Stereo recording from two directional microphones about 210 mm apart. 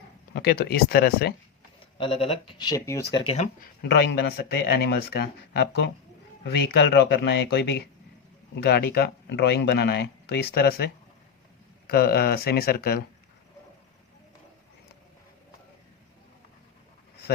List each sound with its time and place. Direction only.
0.3 s speech: 50° left (ahead or behind)
2.0 s speech: 25° left (ahead or behind)
3.1 s speech: 25° left (ahead or behind)
3.9 s speech: 50° left (ahead or behind)
11.9 s speech: 45° left (ahead or behind)